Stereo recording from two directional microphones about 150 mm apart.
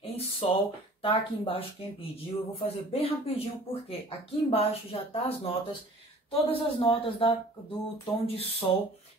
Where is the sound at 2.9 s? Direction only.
40° left (ahead or behind).